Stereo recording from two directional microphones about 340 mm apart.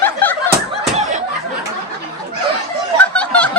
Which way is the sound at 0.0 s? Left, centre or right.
Centre.